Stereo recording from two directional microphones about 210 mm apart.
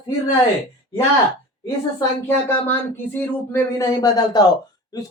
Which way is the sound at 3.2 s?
10° left (ahead or behind).